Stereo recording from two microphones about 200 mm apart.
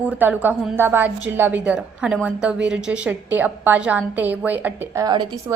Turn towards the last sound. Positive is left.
turn(degrees=-20)  # may be behind; listen again after turning